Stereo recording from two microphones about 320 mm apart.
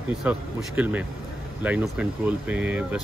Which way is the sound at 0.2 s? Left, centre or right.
Centre.